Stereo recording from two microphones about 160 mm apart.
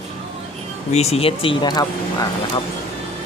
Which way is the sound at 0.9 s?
40° left (ahead or behind).